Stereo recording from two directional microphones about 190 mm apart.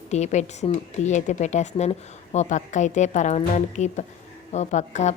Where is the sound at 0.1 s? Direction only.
35° left (ahead or behind).